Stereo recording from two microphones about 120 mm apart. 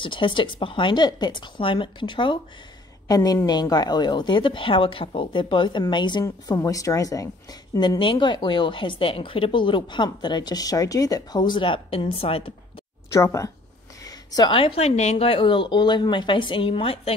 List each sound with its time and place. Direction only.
0.0 s a woman's voice: 45° left (ahead or behind)
3.1 s a woman's voice: 30° left (ahead or behind)
6.2 s a woman's voice: 30° left (ahead or behind)
8.0 s a woman's voice: 45° left (ahead or behind)
13.1 s a woman's voice: 25° left (ahead or behind)
14.0 s a sound: 35° left (ahead or behind)
14.5 s a woman's voice: 50° left (ahead or behind)